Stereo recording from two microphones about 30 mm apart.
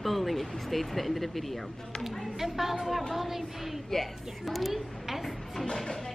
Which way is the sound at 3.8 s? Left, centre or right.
Centre.